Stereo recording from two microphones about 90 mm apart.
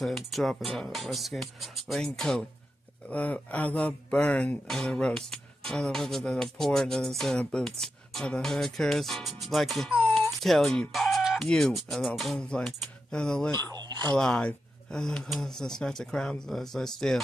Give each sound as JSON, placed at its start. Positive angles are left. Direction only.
{"t": 0.0, "sound": "speech", "side_deg": 0}
{"t": 4.6, "sound": "speech", "side_deg": 5}
{"t": 10.1, "sound": "chicken", "side_deg": 5}
{"t": 11.4, "sound": "speech", "side_deg": 5}
{"t": 13.6, "sound": "a sound", "side_deg": -50}
{"t": 14.1, "sound": "speech", "side_deg": 10}